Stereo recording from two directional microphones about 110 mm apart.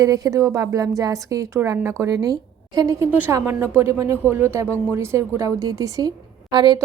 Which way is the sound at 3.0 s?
15° right (ahead or behind).